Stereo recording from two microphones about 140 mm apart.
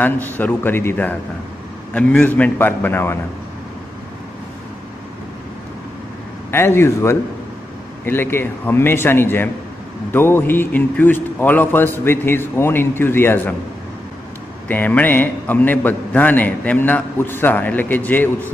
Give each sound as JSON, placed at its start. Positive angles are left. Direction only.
{"t": 0.0, "sound": "a man's voice", "side_deg": 10}
{"t": 6.5, "sound": "a man's voice", "side_deg": 15}
{"t": 14.7, "sound": "a man's voice", "side_deg": 10}